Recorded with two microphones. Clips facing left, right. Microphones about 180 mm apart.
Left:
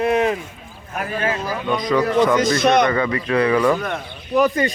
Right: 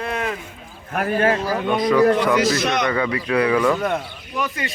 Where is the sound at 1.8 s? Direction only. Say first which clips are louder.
Right 1 dB; 10° right (ahead or behind).